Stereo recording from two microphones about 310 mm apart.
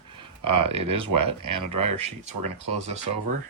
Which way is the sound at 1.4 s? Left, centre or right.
Right.